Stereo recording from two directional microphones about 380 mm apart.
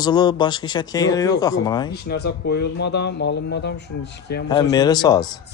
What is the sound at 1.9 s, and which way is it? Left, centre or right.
Speech, left.